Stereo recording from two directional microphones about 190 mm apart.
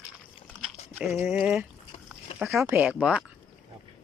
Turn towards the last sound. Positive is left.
turn(degrees=-5)  # may be behind; listen again after turning